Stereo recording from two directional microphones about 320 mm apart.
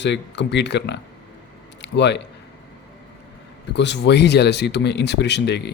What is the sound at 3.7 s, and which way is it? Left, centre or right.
A man's voice, left.